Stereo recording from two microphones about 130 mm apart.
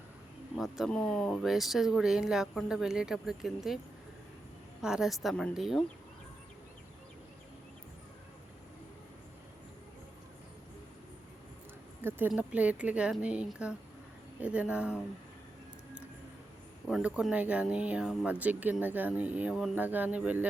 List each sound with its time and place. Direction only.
0.5 s speech: centre (ahead or behind)
4.8 s speech: 5° right (ahead or behind)
12.0 s a sound: 15° right (ahead or behind)
12.4 s speech: 10° right (ahead or behind)
17.0 s speech: 10° right (ahead or behind)